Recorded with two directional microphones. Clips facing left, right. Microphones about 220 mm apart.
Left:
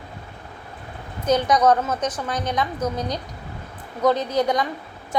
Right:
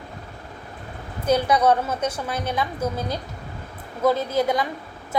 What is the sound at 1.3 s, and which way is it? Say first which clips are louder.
A woman's voice: left 1 dB; 10° right (ahead or behind).